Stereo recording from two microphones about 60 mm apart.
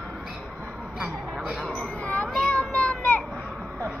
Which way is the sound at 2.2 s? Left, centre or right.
Centre.